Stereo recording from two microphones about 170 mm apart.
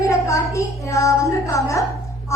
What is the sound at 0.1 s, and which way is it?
Speech, 15° left (ahead or behind).